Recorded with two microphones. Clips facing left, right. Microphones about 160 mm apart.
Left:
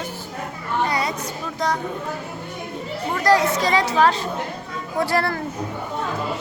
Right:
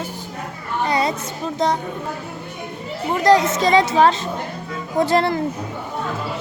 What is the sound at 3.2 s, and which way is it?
Speech, 20° right (ahead or behind).